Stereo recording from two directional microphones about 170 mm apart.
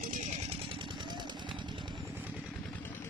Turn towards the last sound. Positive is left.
turn(degrees=-25)  # may be behind; listen again after turning